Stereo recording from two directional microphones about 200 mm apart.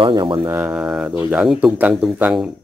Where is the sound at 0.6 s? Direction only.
5° right (ahead or behind).